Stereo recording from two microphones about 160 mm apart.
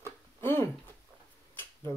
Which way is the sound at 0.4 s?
15° left (ahead or behind).